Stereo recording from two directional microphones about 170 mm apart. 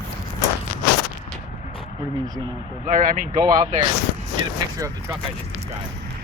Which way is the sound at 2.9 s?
50° right (ahead or behind).